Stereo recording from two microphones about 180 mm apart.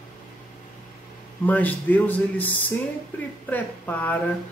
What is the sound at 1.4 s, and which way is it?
A man's voice, 10° left (ahead or behind).